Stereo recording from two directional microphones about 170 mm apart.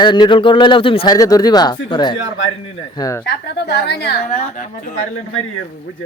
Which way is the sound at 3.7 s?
80° left.